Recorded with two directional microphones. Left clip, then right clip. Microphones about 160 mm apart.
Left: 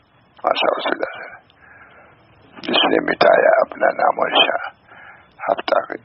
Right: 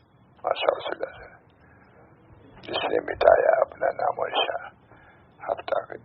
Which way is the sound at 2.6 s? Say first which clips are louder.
Left 10 dB; 35° left (ahead or behind).